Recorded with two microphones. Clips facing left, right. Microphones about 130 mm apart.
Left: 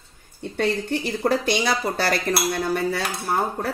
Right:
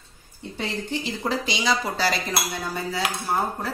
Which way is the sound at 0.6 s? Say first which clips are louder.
Left 6 dB; 55° left (ahead or behind).